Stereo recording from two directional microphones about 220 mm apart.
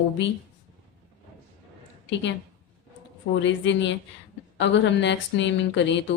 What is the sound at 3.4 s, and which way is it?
Speech, 55° left (ahead or behind).